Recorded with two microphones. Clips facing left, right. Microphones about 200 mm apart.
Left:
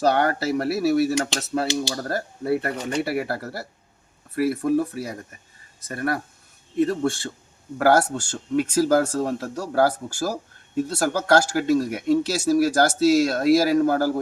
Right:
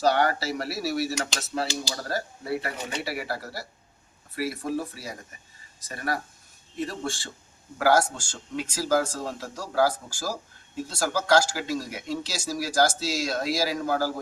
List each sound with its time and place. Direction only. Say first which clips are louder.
0.0 s speech: left 3 dB; 50° left (ahead or behind)